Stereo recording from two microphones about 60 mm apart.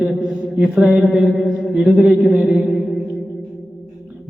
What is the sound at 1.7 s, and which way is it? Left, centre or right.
Speech, right.